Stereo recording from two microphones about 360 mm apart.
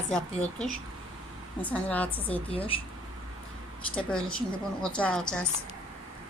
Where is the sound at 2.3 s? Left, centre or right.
Centre.